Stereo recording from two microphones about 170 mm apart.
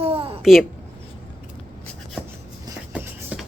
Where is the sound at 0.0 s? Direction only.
35° right (ahead or behind).